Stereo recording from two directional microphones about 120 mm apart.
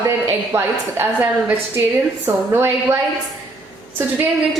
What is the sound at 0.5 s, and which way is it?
A woman's voice, 15° right (ahead or behind).